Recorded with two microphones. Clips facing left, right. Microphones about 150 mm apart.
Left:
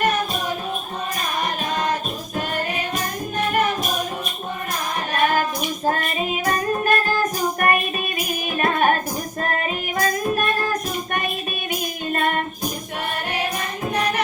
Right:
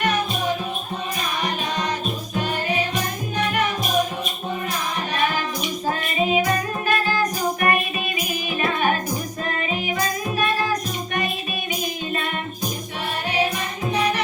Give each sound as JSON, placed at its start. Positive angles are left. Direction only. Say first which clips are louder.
{"t": 5.1, "sound": "music", "louder": "left 5 dB", "side_deg": 50}
{"t": 13.9, "sound": "music", "louder": "right 1 dB", "side_deg": 55}